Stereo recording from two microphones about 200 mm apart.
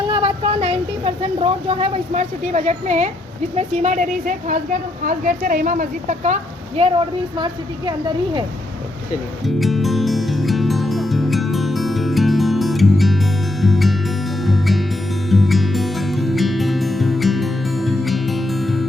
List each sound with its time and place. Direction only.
0.1 s a woman's voice: 25° right (ahead or behind)
7.3 s a woman's voice: 25° right (ahead or behind)
9.6 s music: centre (ahead or behind)